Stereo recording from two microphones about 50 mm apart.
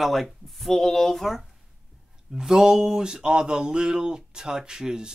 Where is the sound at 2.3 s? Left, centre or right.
Centre.